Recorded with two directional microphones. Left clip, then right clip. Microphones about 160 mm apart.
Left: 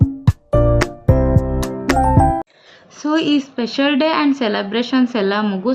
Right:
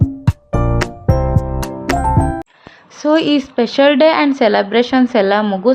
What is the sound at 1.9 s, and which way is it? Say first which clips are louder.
Music: left 1 dB; centre (ahead or behind).